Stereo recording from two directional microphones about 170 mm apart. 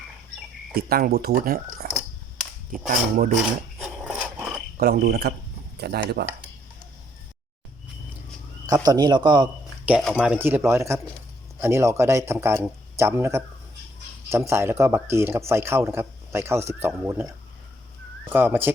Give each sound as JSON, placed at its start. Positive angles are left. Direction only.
{"t": 0.7, "sound": "speech", "side_deg": -65}
{"t": 4.0, "sound": "a sound", "side_deg": 0}
{"t": 4.8, "sound": "frog", "side_deg": -65}
{"t": 8.6, "sound": "a man's voice", "side_deg": -20}
{"t": 9.8, "sound": "speech", "side_deg": -5}
{"t": 10.3, "sound": "speech", "side_deg": -15}
{"t": 18.3, "sound": "speech", "side_deg": -10}